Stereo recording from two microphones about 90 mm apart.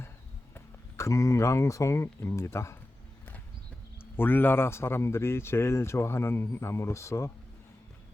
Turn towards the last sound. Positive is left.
turn(degrees=30)  # may be behind; listen again after turning